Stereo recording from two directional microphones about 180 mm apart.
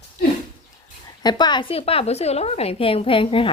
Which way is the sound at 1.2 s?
25° left (ahead or behind).